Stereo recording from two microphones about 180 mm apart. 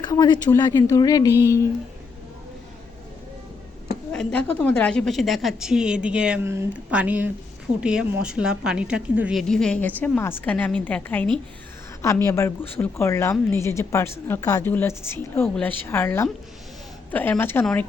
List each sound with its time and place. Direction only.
0.0 s speech: 25° left (ahead or behind)
4.1 s a woman's voice: 5° left (ahead or behind)